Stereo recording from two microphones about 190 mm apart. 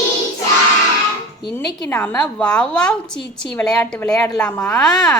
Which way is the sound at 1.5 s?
10° left (ahead or behind).